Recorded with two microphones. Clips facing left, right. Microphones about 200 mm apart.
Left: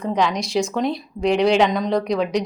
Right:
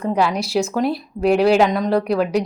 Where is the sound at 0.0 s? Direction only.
5° right (ahead or behind).